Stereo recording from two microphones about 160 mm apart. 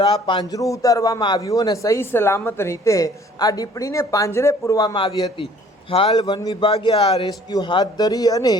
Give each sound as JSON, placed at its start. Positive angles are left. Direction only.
{"t": 0.0, "sound": "a man's voice", "side_deg": 35}